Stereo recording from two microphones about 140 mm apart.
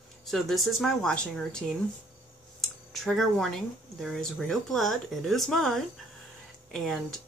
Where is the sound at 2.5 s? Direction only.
Centre (ahead or behind).